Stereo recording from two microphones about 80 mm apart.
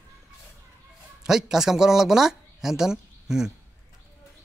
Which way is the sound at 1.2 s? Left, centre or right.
Centre.